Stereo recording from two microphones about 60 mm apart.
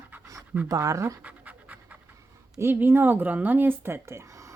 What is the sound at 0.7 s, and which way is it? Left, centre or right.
Speech, right.